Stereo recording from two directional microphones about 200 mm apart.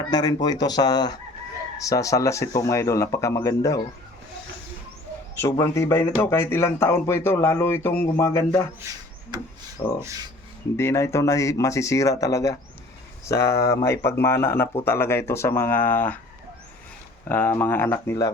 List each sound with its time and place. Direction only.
0.1 s speech: 20° left (ahead or behind)
5.4 s speech: 15° left (ahead or behind)
10.0 s speech: 15° right (ahead or behind)
10.8 s speech: 15° left (ahead or behind)
17.2 s speech: 10° left (ahead or behind)